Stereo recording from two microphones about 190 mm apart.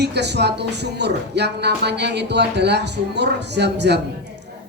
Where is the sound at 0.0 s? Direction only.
60° right (ahead or behind).